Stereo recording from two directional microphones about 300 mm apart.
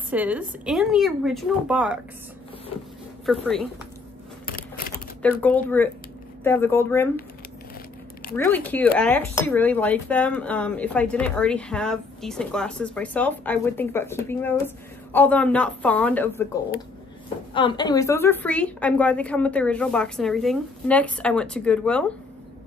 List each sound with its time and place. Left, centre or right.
0.1 s speech: centre
3.3 s speech: centre
4.5 s a sound: left
5.2 s speech: centre
8.4 s speech: centre
17.6 s speech: centre